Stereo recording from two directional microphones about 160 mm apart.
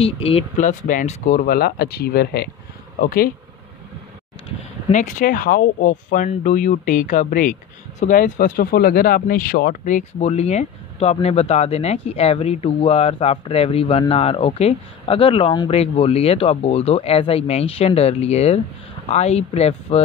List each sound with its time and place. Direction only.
0.0 s speech: 35° left (ahead or behind)
0.6 s speech: 55° left (ahead or behind); by 2.5 s 80° left
3.0 s speech: 65° left (ahead or behind)
4.8 s speech: 50° left (ahead or behind)